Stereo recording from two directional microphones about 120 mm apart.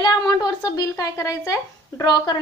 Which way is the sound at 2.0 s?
35° left (ahead or behind).